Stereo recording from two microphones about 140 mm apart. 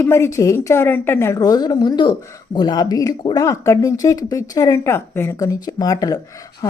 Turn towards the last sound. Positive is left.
turn(degrees=25)  # may be behind; listen again after turning